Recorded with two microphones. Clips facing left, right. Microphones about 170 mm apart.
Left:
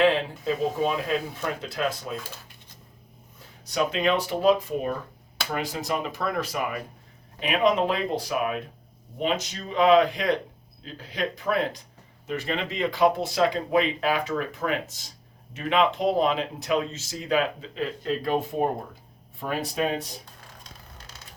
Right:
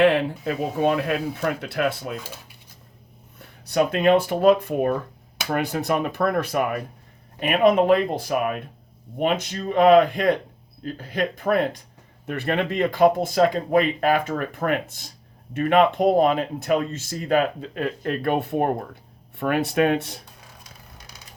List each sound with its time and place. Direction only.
0.0 s speech: 65° right (ahead or behind)
3.3 s speech: 60° right (ahead or behind)
20.7 s a sound: 15° right (ahead or behind)